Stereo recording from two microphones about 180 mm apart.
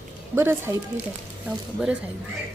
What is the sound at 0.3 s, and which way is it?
Speech, 15° right (ahead or behind).